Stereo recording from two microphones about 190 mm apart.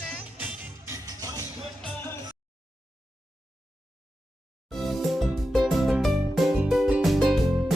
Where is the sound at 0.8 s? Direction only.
15° right (ahead or behind).